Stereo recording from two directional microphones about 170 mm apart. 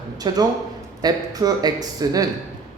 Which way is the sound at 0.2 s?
25° right (ahead or behind).